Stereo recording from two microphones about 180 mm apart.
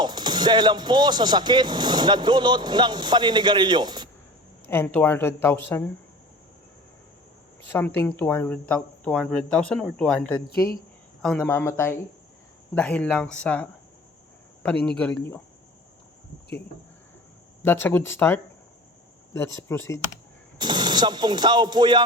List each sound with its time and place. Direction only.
0.0 s speech: 25° right (ahead or behind)
4.7 s speech: 10° left (ahead or behind)
7.7 s speech: 10° left (ahead or behind)
14.8 s speech: 5° left (ahead or behind)
17.6 s speech: 10° left (ahead or behind)
20.6 s speech: 25° right (ahead or behind)